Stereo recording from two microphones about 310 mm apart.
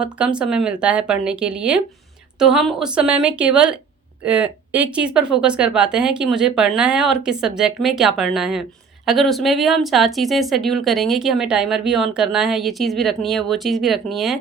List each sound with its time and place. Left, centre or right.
0.0 s speech: centre